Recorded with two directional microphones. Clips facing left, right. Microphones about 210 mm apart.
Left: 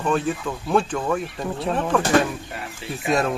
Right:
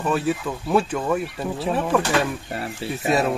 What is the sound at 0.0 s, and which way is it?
Speech, 5° right (ahead or behind).